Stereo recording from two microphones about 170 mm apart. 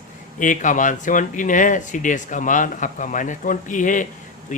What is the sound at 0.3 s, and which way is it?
Speech, 50° left (ahead or behind).